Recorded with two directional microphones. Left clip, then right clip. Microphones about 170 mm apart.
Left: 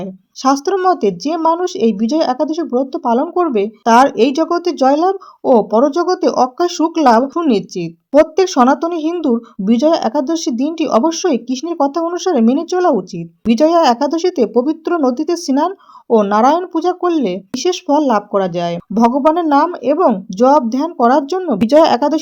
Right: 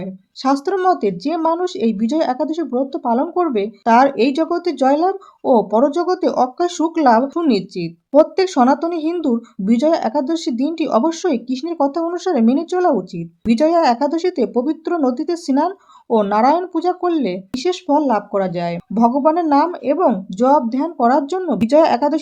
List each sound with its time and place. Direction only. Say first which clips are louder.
0.0 s speech: left 5 dB; 25° left (ahead or behind)